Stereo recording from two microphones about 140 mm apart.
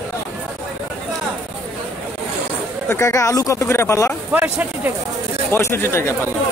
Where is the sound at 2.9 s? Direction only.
20° left (ahead or behind).